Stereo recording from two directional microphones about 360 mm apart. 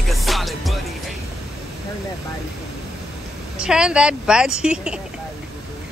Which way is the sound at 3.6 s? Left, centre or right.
Centre.